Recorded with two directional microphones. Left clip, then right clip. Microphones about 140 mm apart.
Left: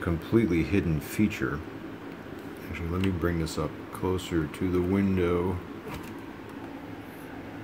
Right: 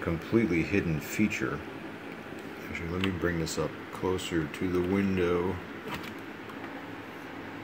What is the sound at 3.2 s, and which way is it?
Speech, 5° left (ahead or behind).